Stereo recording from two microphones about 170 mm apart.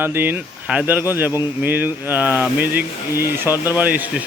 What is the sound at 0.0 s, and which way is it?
Speech, 10° right (ahead or behind).